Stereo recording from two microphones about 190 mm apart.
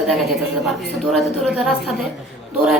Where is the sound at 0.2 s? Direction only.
Centre (ahead or behind).